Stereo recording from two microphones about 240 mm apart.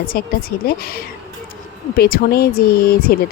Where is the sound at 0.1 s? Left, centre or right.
Left.